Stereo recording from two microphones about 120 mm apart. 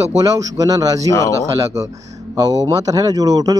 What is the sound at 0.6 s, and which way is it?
Speech, 30° right (ahead or behind).